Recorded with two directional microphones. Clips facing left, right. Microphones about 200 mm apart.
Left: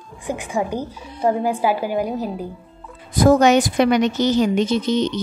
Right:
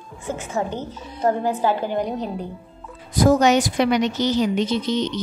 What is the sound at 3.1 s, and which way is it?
A woman's voice, 55° left (ahead or behind).